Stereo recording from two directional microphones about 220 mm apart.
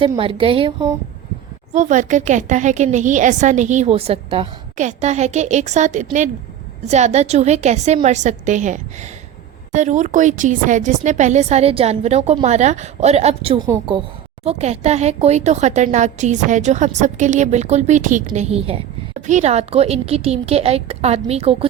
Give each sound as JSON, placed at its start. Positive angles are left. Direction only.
{"t": 0.0, "sound": "a woman's voice", "side_deg": -25}
{"t": 1.7, "sound": "a woman's voice", "side_deg": -35}
{"t": 14.4, "sound": "a woman's voice", "side_deg": -30}